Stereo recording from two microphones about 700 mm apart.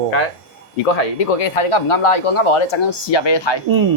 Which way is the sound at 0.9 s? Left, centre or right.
Left.